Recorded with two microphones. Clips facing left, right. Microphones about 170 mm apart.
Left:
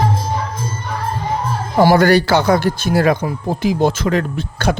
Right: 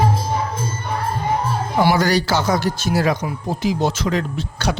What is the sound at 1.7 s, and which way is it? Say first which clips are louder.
A man's voice: left 6 dB; 50° left (ahead or behind).